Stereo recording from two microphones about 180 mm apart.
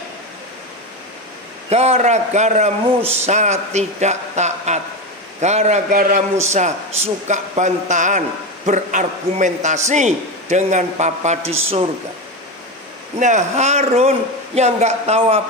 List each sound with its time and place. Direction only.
1.7 s a man's voice: 35° right (ahead or behind)
6.4 s a man's voice: 40° right (ahead or behind)
13.2 s a man's voice: 40° right (ahead or behind)